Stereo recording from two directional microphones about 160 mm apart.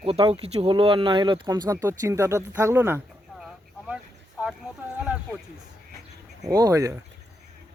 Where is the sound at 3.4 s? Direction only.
5° right (ahead or behind).